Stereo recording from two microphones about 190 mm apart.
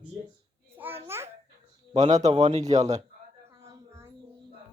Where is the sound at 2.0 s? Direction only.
40° right (ahead or behind).